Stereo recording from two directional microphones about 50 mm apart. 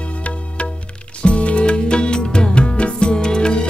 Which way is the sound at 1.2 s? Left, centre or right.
Left.